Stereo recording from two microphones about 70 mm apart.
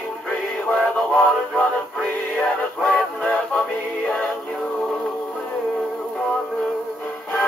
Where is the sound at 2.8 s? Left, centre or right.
Centre.